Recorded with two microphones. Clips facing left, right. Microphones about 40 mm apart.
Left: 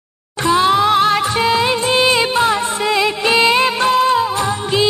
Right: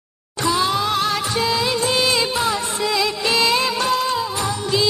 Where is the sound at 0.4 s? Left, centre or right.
Left.